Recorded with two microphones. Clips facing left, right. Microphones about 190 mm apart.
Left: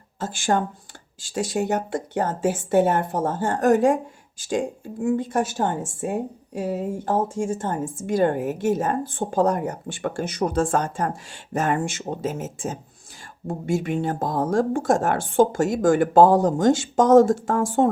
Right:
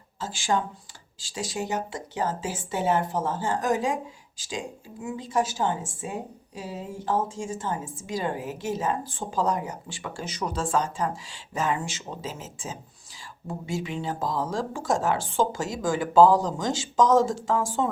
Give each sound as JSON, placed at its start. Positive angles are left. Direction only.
{"t": 0.2, "sound": "speech", "side_deg": 55}